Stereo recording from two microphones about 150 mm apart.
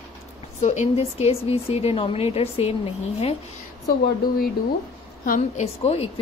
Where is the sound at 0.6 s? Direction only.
50° left (ahead or behind).